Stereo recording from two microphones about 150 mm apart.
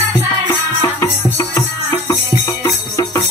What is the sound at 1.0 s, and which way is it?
Music, 15° left (ahead or behind).